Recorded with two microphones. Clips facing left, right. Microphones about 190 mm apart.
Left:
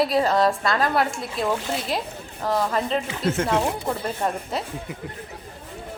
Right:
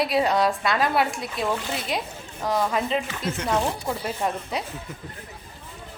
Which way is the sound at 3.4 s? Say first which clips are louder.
Left 2 dB; 50° left (ahead or behind).